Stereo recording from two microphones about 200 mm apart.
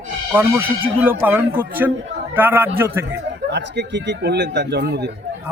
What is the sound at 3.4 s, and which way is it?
Speech, 60° right (ahead or behind).